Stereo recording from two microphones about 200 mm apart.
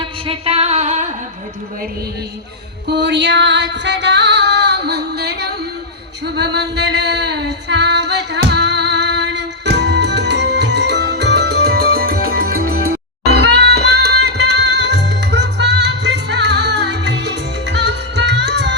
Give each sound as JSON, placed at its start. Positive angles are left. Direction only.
{"t": 0.0, "sound": "a sound", "side_deg": -30}
{"t": 2.8, "sound": "music", "side_deg": -60}
{"t": 6.2, "sound": "female singing", "side_deg": -55}
{"t": 12.5, "sound": "music", "side_deg": -90}
{"t": 12.9, "sound": "music", "side_deg": -55}